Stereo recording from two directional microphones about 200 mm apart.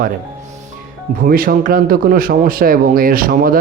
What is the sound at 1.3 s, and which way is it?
Speech, 45° right (ahead or behind).